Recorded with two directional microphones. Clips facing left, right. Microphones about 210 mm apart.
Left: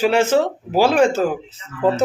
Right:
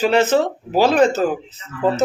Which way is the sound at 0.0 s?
10° left (ahead or behind).